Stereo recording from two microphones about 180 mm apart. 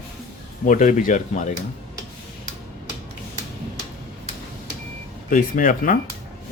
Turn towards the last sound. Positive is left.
turn(degrees=50)  # may be behind; listen again after turning